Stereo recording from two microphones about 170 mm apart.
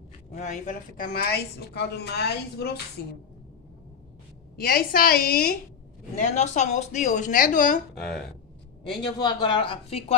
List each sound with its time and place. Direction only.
0.3 s speech: 45° left (ahead or behind); by 2.8 s 70° left (ahead or behind)
4.6 s a woman's voice: 60° left (ahead or behind)
6.1 s speech: 45° left (ahead or behind)
7.9 s speech: centre (ahead or behind)
9.0 s speech: 25° left (ahead or behind)